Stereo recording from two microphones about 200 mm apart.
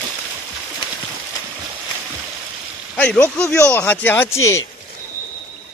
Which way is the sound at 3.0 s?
5° left (ahead or behind).